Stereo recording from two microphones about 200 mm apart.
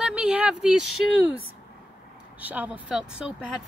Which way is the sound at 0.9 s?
90° left.